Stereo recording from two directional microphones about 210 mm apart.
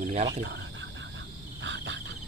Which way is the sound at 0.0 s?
35° right (ahead or behind).